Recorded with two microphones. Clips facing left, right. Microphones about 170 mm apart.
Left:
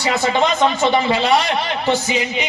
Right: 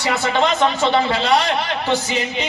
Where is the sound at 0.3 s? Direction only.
15° left (ahead or behind).